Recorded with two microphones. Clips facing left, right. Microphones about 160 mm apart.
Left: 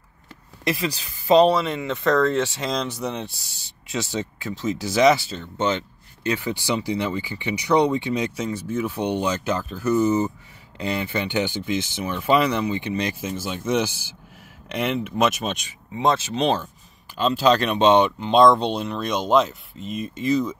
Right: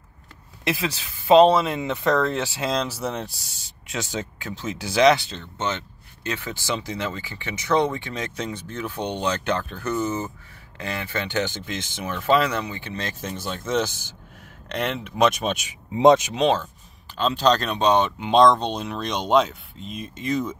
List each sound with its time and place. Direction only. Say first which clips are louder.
0.7 s speech: left 1 dB; centre (ahead or behind); by 8.3 s 15° left (ahead or behind)
8.4 s speech: left 5 dB; 5° left (ahead or behind)
12.3 s speech: left 1 dB; 15° left (ahead or behind)
15.9 s speech: right 6 dB; 20° right (ahead or behind)
17.2 s speech: left 2 dB; 5° left (ahead or behind)
17.7 s speech: left 3 dB; 20° left (ahead or behind)
18.2 s speech: left 1 dB; 5° left (ahead or behind)